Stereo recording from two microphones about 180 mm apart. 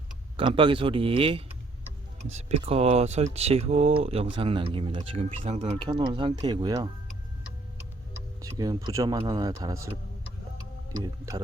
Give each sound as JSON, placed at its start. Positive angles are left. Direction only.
{"t": 0.3, "sound": "speech", "side_deg": -25}
{"t": 8.4, "sound": "speech", "side_deg": -20}
{"t": 10.9, "sound": "speech", "side_deg": -20}